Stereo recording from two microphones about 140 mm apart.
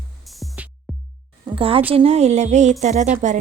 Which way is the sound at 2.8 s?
60° right (ahead or behind).